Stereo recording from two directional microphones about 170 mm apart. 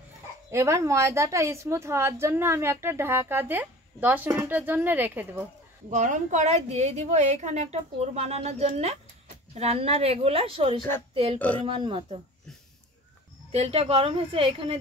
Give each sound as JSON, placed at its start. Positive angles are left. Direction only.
{"t": 0.5, "sound": "a woman's voice", "side_deg": -15}
{"t": 5.9, "sound": "a woman's voice", "side_deg": -45}
{"t": 11.3, "sound": "speech", "side_deg": 10}
{"t": 11.6, "sound": "speech", "side_deg": -30}
{"t": 13.5, "sound": "a woman's voice", "side_deg": -35}